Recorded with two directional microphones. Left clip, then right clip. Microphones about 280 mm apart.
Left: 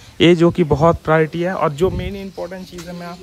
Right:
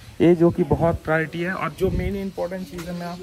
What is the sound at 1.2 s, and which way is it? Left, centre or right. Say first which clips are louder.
Speech: left 8 dB; centre.